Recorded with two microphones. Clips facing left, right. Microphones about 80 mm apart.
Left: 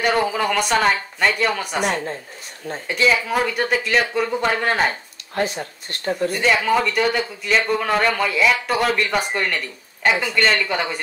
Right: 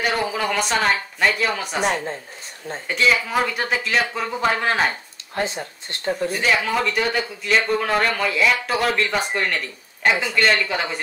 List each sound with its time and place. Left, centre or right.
0.0 s speech: centre
5.4 s speech: right
6.3 s speech: centre